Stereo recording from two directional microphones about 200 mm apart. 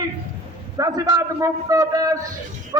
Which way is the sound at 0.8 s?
15° right (ahead or behind).